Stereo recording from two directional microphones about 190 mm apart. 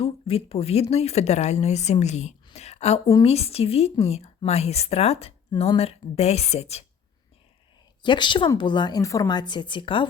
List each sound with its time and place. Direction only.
0.0 s a woman's voice: 30° left (ahead or behind)
8.0 s a woman's voice: 25° left (ahead or behind)